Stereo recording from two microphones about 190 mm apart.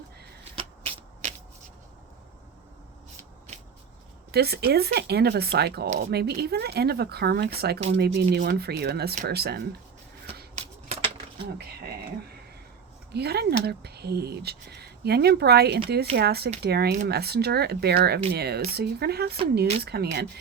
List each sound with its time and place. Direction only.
0.5 s shuffle: 30° right (ahead or behind)
4.3 s speech: 55° right (ahead or behind)
13.1 s speech: 60° right (ahead or behind)